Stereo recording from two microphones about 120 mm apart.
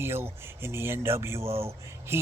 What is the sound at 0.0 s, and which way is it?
Speech, 20° right (ahead or behind).